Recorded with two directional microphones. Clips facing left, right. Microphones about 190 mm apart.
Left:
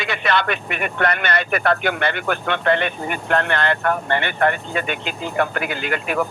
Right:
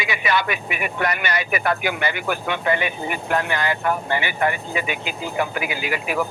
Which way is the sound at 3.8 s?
60° left (ahead or behind).